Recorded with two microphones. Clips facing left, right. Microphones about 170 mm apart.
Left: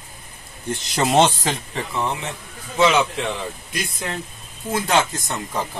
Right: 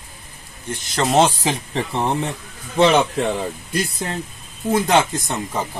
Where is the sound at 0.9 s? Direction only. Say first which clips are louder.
Right 1 dB; centre (ahead or behind).